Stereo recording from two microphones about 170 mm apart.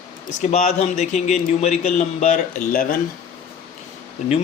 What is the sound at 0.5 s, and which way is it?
Speech, 45° left (ahead or behind).